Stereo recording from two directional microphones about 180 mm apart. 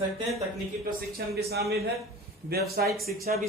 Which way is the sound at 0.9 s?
55° right (ahead or behind).